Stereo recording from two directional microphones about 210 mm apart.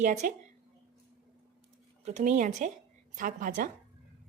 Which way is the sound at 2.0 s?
30° right (ahead or behind).